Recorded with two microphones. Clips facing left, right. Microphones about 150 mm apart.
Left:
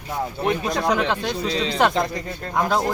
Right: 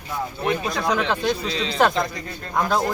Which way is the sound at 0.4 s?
20° left (ahead or behind).